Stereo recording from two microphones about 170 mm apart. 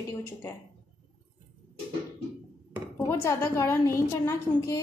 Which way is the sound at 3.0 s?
15° left (ahead or behind).